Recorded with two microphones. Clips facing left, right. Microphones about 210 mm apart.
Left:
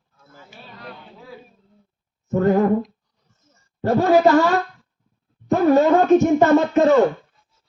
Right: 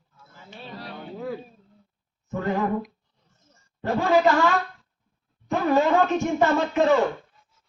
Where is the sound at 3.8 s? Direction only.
40° left (ahead or behind).